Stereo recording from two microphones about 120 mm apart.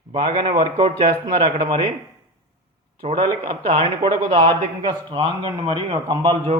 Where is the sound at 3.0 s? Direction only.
55° right (ahead or behind).